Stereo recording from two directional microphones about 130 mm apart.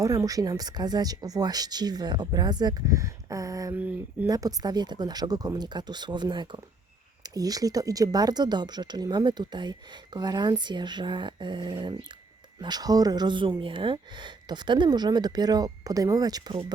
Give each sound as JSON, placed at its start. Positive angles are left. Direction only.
{"t": 0.0, "sound": "speech", "side_deg": -25}